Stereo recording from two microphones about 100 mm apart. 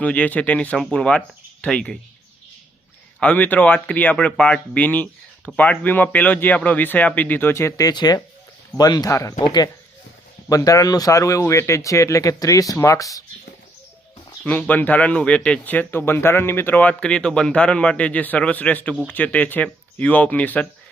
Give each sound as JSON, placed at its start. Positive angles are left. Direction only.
{"t": 0.0, "sound": "speech", "side_deg": 15}
{"t": 3.2, "sound": "speech", "side_deg": 15}
{"t": 7.9, "sound": "speech", "side_deg": 45}
{"t": 9.4, "sound": "speech", "side_deg": 45}
{"t": 14.4, "sound": "speech", "side_deg": 15}